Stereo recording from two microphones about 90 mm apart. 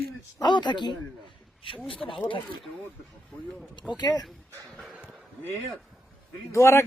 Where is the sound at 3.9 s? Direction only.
50° left (ahead or behind).